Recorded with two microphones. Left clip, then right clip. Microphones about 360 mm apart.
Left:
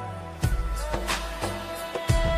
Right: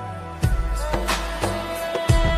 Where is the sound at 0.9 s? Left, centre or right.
Right.